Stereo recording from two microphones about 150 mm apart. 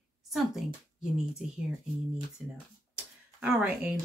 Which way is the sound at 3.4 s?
5° right (ahead or behind).